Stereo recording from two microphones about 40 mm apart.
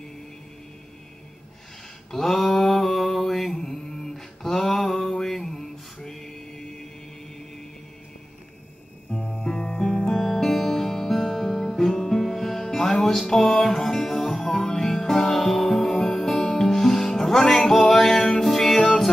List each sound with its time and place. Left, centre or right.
2.4 s mantra: left
2.7 s a sound: centre
9.4 s music: centre